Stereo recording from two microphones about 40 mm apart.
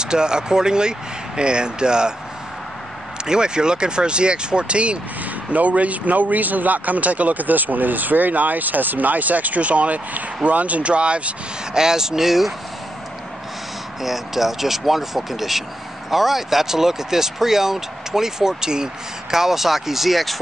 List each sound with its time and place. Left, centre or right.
0.0 s speech: centre
3.3 s speech: right
11.7 s speech: centre
14.0 s speech: centre